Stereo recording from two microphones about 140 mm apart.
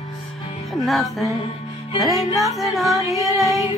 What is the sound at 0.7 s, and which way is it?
Music, centre (ahead or behind).